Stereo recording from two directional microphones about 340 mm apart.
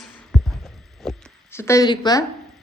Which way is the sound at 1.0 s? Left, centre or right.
Centre.